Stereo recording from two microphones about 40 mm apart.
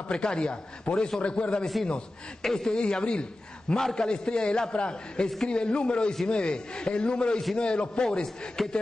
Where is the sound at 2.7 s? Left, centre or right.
Left.